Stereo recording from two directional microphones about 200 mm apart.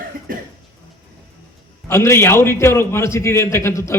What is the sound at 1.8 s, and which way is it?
A man's voice, 15° left (ahead or behind).